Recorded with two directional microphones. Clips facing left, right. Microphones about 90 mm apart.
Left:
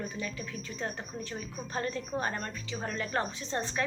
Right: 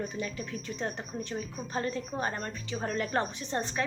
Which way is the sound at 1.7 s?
25° right (ahead or behind).